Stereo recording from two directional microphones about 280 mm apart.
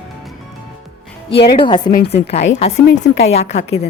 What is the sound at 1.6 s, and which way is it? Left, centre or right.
A woman's voice, centre.